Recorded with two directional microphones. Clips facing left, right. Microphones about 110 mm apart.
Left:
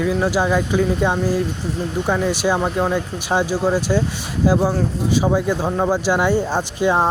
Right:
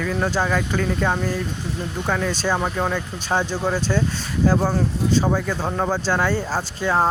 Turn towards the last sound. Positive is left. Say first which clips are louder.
# left 3 dB
turn(degrees=15)  # may be behind; listen again after turning